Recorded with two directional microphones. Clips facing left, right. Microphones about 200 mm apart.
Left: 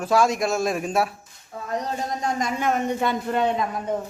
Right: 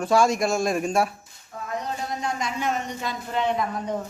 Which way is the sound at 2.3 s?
50° left (ahead or behind).